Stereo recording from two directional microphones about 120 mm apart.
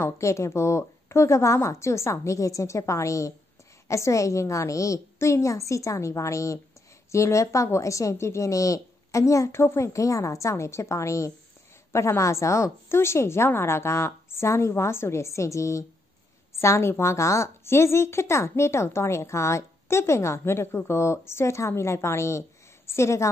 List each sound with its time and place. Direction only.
0.0 s a woman's voice: 25° left (ahead or behind)